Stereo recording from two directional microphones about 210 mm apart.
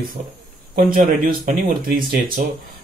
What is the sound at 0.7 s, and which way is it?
Speech, 40° right (ahead or behind).